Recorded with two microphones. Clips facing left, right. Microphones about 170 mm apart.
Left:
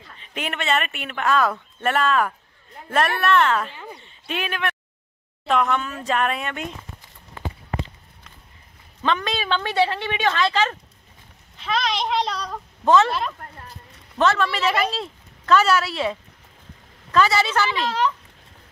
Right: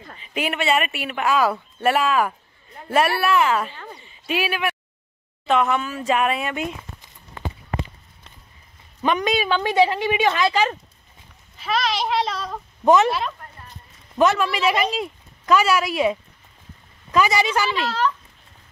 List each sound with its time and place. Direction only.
0.2 s speech: 5° right (ahead or behind)
3.7 s speech: 10° left (ahead or behind)
4.0 s speech: 5° right (ahead or behind)
9.0 s speech: 15° right (ahead or behind)
12.8 s speech: 15° right (ahead or behind)
14.1 s speech: 15° right (ahead or behind)
17.8 s speech: 20° left (ahead or behind)